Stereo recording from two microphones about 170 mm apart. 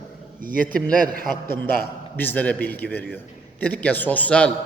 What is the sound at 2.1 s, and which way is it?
A man's voice, 10° left (ahead or behind).